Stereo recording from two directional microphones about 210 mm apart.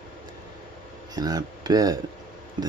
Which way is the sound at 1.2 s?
20° right (ahead or behind).